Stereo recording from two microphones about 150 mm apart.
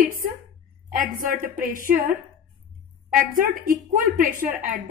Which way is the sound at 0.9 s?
70° right (ahead or behind).